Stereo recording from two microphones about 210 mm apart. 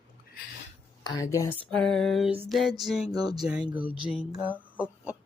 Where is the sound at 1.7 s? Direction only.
5° left (ahead or behind).